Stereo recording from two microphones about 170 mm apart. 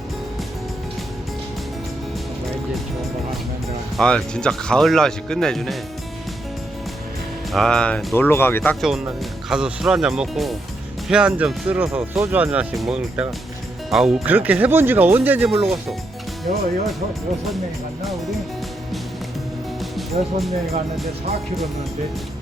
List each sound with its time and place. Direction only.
3.9 s speech: 5° left (ahead or behind)
7.5 s speech: centre (ahead or behind)
8.7 s speech: centre (ahead or behind)
16.5 s speech: 55° right (ahead or behind)
19.8 s music: centre (ahead or behind)